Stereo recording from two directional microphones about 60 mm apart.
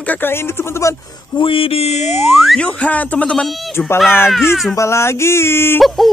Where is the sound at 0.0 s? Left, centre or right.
Left.